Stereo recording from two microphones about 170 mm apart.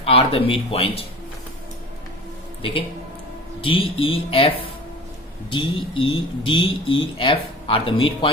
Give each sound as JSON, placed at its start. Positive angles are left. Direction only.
{"t": 0.0, "sound": "speech", "side_deg": 35}
{"t": 2.6, "sound": "speech", "side_deg": 30}